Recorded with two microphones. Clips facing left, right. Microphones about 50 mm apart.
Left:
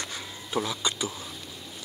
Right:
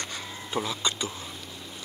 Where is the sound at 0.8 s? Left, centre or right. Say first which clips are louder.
Even; centre.